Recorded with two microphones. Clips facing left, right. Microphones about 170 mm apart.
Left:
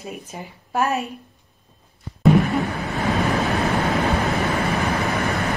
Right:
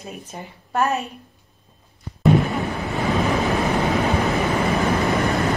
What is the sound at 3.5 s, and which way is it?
Vehicle, 20° right (ahead or behind).